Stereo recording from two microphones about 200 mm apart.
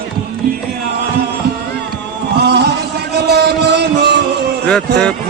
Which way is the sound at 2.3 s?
55° right (ahead or behind).